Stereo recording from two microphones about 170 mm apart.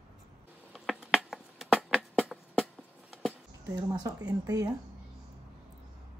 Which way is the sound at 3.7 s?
20° right (ahead or behind).